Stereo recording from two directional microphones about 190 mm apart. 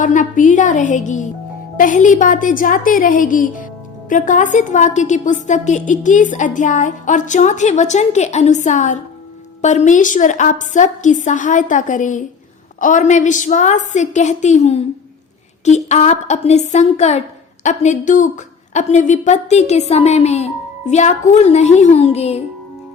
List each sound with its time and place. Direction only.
0.0 s a woman's voice: 45° left (ahead or behind)